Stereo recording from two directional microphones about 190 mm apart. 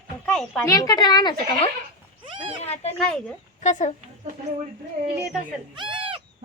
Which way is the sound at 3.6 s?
40° left (ahead or behind).